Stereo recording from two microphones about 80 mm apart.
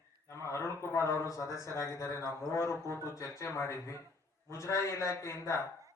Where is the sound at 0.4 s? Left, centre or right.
Left.